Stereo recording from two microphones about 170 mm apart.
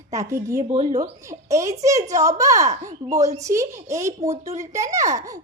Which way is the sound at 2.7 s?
50° right (ahead or behind).